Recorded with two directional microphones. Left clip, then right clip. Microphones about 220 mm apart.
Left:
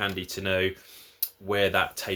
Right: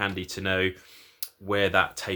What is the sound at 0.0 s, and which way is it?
Speech, 20° right (ahead or behind).